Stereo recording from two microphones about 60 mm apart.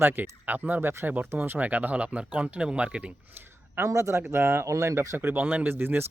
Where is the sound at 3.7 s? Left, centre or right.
Right.